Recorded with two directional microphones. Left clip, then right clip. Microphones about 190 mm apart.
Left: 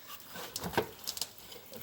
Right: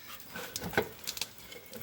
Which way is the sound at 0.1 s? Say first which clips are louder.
Right 1 dB; centre (ahead or behind).